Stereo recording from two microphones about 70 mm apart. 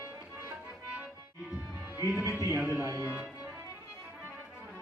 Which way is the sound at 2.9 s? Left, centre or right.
Right.